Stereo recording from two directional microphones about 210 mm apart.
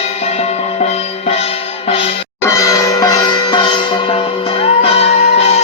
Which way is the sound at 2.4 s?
15° left (ahead or behind).